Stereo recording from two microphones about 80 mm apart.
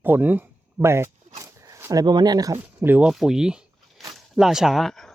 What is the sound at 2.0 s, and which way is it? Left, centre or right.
Speech, right.